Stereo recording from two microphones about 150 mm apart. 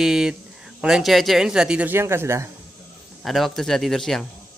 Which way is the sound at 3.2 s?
Centre (ahead or behind).